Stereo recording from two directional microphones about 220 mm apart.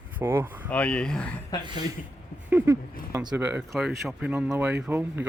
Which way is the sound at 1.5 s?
20° left (ahead or behind).